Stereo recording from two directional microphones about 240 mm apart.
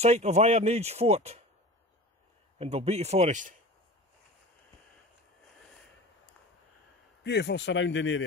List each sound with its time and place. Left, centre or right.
0.0 s speech: right
2.6 s speech: right
7.2 s speech: left